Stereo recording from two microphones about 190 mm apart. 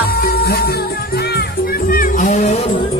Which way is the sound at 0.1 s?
55° left (ahead or behind).